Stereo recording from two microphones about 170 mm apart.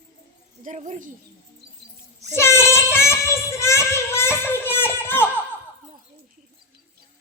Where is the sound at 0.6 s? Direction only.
50° right (ahead or behind).